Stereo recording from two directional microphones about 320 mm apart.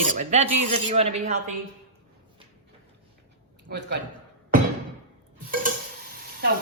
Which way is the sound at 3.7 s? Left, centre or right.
Right.